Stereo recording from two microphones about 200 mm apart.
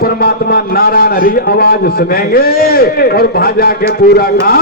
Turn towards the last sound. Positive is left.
turn(degrees=50)  # may be behind; listen again after turning